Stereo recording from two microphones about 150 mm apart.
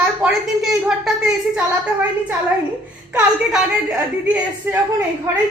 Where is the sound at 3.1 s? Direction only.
5° right (ahead or behind).